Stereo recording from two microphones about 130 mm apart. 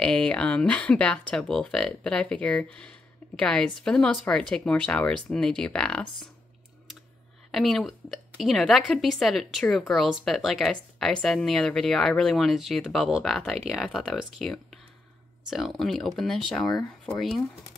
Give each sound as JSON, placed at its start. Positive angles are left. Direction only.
{"t": 0.0, "sound": "speech", "side_deg": 5}
{"t": 7.5, "sound": "a woman's voice", "side_deg": 0}